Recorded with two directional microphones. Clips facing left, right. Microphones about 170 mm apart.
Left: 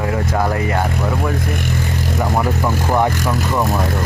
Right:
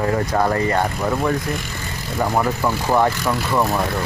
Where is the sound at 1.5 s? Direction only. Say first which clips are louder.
Left 6 dB; 55° left (ahead or behind).